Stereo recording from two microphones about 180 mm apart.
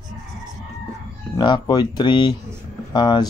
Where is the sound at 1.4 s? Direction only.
25° left (ahead or behind).